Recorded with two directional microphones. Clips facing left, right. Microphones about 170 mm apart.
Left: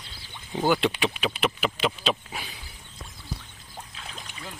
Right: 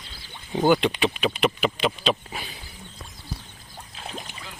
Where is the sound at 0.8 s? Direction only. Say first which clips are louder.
Right 2 dB; 5° left (ahead or behind).